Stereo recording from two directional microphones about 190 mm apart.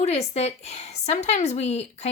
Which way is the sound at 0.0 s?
35° left (ahead or behind).